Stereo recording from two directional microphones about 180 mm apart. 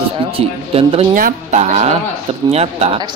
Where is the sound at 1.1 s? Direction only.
45° right (ahead or behind).